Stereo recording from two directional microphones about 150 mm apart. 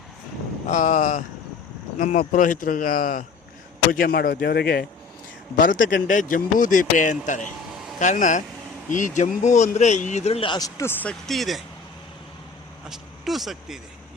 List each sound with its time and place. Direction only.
0.7 s speech: 60° left (ahead or behind)
3.9 s speech: 85° left
5.5 s speech: 65° left (ahead or behind); by 10.7 s 35° left (ahead or behind)
10.8 s speech: 15° left (ahead or behind)
12.9 s speech: centre (ahead or behind)